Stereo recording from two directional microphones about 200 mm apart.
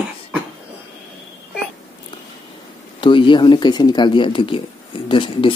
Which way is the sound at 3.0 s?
25° left (ahead or behind).